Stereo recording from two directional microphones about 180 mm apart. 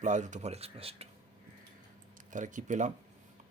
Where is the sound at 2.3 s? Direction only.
45° right (ahead or behind).